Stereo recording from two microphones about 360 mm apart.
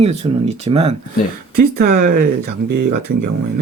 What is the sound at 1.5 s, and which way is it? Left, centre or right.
Speech, right.